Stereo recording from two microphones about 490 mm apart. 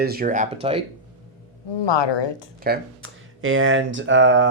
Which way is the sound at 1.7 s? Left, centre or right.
Left.